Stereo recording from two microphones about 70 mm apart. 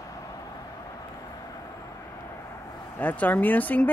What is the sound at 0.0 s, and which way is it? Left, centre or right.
Vehicle, left.